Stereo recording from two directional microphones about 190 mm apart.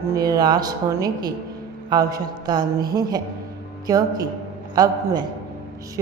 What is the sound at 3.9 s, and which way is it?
Speech, 20° right (ahead or behind).